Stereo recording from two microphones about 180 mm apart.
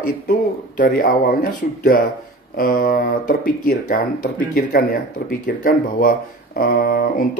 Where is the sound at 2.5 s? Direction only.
55° left (ahead or behind).